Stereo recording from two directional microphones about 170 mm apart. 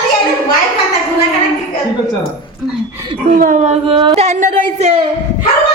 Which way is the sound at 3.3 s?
50° right (ahead or behind).